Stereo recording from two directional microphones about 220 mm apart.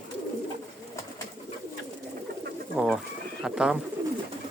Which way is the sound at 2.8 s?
5° right (ahead or behind).